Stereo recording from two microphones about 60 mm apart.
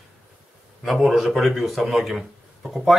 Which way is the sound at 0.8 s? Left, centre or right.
Centre.